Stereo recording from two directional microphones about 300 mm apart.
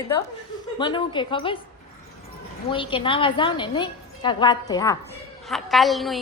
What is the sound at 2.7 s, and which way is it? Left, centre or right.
A woman's voice, centre.